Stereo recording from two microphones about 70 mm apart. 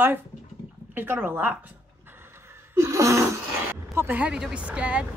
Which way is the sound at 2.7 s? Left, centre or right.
Right.